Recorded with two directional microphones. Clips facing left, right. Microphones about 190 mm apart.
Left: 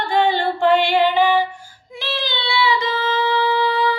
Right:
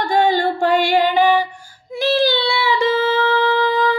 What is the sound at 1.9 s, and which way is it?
Child singing, 45° right (ahead or behind).